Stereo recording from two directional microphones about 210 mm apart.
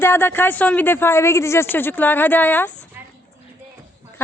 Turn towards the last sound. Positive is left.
turn(degrees=10)  # may be behind; listen again after turning